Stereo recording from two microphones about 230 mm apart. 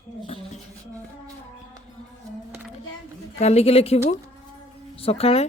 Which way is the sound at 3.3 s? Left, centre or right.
Left.